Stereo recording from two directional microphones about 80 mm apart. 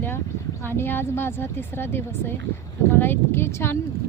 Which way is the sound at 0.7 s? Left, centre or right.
Left.